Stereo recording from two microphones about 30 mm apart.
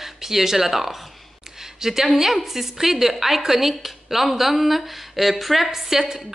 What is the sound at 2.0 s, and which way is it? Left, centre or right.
A woman's voice, centre.